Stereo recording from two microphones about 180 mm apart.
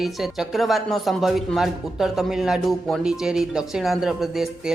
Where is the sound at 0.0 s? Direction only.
Centre (ahead or behind).